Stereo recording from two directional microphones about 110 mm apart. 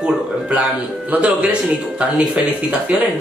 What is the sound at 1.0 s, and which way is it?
Speech, 15° right (ahead or behind).